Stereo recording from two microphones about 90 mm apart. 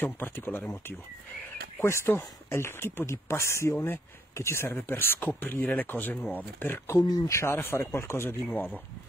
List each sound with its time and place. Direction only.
0.0 s speech: 20° left (ahead or behind)
7.0 s speech: 50° left (ahead or behind)
7.2 s speech: 30° left (ahead or behind)